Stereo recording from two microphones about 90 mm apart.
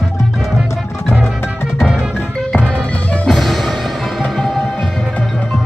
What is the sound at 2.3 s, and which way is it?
Music, 5° left (ahead or behind).